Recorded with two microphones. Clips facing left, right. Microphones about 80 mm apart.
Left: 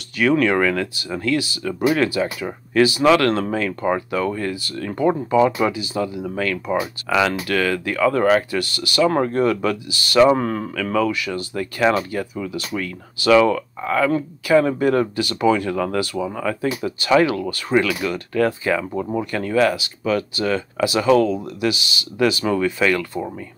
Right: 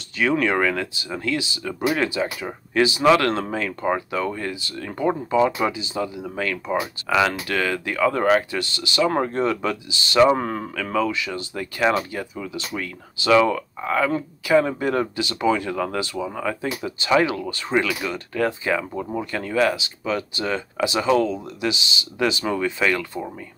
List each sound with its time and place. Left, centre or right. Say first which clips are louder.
0.2 s speech: left 3 dB; right
6.7 s speech: even; centre
7.2 s speech: left 3 dB; right
17.8 s speech: left 3 dB; left
18.3 s speech: left 3 dB; right
21.1 s speech: left 4 dB; left
21.5 s speech: left 3 dB; right